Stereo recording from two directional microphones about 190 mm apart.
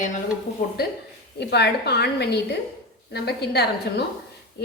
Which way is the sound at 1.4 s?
60° left (ahead or behind).